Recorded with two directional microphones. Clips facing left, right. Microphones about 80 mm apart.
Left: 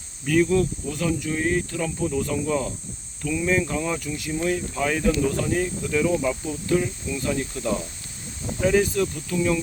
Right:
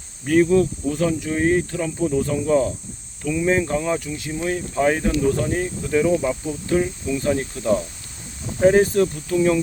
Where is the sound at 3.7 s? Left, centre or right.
Right.